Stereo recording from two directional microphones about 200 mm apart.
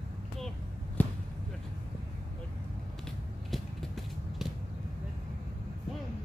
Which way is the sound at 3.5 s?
Centre (ahead or behind).